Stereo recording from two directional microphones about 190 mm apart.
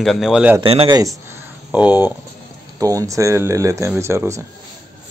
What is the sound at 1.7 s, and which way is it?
Speech, 5° right (ahead or behind).